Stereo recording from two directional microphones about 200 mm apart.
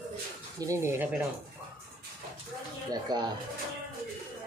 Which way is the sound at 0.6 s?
15° right (ahead or behind).